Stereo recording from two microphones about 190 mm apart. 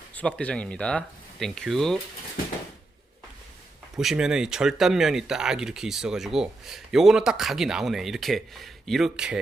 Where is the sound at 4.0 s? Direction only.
5° right (ahead or behind).